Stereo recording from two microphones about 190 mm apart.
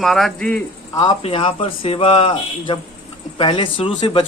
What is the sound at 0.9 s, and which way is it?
Speech, 25° left (ahead or behind).